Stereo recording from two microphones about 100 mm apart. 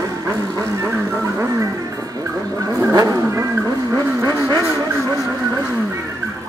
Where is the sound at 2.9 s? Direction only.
35° right (ahead or behind).